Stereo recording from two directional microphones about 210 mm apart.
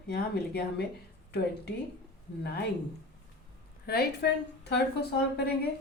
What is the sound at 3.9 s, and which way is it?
Speech, 50° left (ahead or behind).